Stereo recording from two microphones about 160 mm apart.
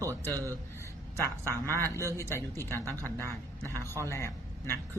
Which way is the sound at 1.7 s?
15° left (ahead or behind).